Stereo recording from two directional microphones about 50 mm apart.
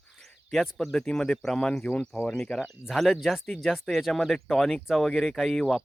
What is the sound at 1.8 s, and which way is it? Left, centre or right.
Speech, left.